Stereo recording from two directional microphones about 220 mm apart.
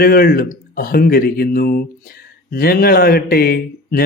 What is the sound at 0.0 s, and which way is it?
Speech, 40° left (ahead or behind).